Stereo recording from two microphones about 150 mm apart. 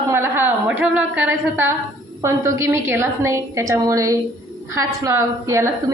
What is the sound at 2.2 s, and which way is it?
A woman's voice, 20° right (ahead or behind).